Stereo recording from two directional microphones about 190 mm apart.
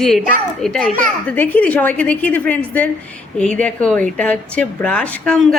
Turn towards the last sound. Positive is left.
turn(degrees=5)  # may be behind; listen again after turning